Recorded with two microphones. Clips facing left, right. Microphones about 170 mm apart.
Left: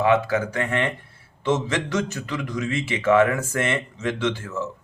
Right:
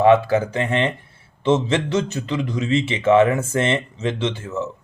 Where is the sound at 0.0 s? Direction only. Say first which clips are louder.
Right 5 dB; 30° right (ahead or behind).